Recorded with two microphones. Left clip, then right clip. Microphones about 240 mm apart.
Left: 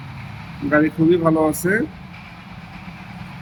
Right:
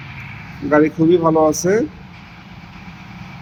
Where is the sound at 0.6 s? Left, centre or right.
Centre.